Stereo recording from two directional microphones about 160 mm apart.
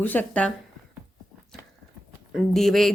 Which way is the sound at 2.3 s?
Centre (ahead or behind).